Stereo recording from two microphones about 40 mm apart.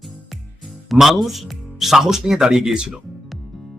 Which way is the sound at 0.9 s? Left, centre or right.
Centre.